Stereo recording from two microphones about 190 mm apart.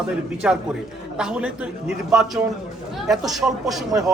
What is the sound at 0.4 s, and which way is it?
A man's voice, 5° right (ahead or behind).